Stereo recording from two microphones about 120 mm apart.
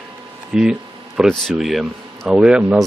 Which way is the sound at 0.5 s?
5° right (ahead or behind).